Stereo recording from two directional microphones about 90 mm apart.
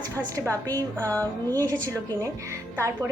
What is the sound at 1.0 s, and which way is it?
Music, 20° left (ahead or behind).